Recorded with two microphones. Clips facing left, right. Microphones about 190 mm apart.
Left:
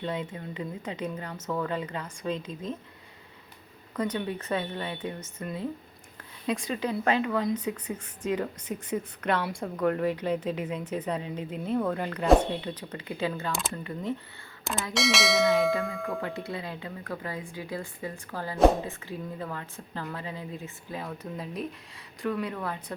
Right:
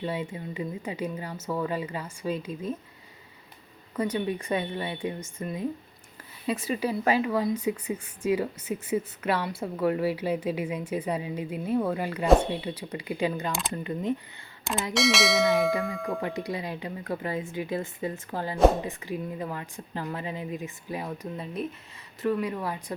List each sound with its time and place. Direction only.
0.0 s speech: 10° right (ahead or behind)
3.9 s speech: 10° right (ahead or behind)
14.6 s a sound: centre (ahead or behind)
14.9 s speech: centre (ahead or behind)
16.2 s speech: 15° right (ahead or behind)
21.3 s speech: centre (ahead or behind)